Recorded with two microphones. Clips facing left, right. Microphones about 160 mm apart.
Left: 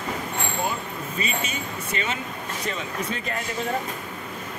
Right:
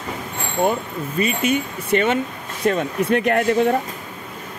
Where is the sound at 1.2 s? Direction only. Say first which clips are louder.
Right 11 dB; 60° right (ahead or behind).